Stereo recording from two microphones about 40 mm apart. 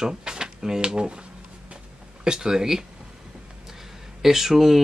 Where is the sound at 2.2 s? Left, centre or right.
Centre.